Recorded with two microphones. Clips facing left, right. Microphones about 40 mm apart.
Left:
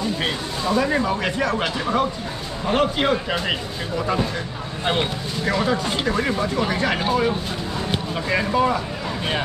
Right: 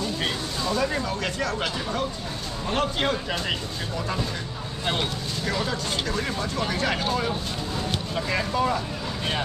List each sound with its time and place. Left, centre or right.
0.2 s speech: centre
4.8 s speech: centre
7.9 s a sound: centre
8.5 s speech: centre